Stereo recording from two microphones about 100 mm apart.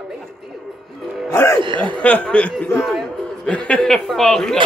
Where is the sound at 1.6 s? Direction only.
55° right (ahead or behind).